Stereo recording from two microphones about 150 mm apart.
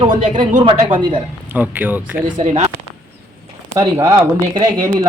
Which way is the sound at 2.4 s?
50° right (ahead or behind).